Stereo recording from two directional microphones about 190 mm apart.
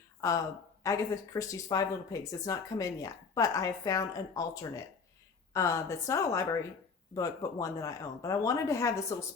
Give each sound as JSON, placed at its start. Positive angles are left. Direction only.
{"t": 0.2, "sound": "speech", "side_deg": 15}
{"t": 5.5, "sound": "speech", "side_deg": 15}